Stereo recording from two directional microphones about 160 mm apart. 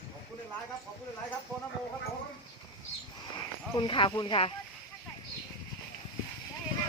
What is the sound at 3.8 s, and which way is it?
Speech, 30° left (ahead or behind).